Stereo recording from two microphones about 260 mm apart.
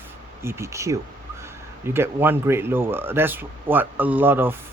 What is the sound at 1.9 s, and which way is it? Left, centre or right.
Speech, centre.